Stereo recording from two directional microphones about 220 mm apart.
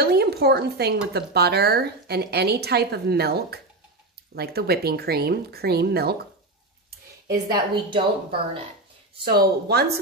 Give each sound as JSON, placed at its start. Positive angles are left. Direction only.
{"t": 0.0, "sound": "dishes", "side_deg": -45}
{"t": 1.1, "sound": "a woman's voice", "side_deg": -45}
{"t": 7.5, "sound": "speech", "side_deg": -20}
{"t": 9.2, "sound": "a woman's voice", "side_deg": -45}